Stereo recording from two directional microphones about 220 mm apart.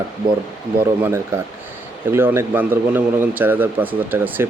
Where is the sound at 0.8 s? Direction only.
10° right (ahead or behind).